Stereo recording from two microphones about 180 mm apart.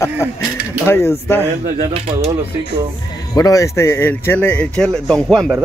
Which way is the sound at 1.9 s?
35° right (ahead or behind).